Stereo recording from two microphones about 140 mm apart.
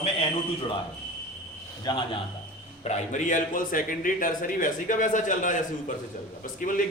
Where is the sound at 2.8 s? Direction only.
55° left (ahead or behind).